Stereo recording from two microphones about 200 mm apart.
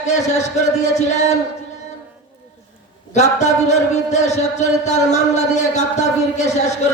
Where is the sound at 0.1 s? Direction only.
35° left (ahead or behind).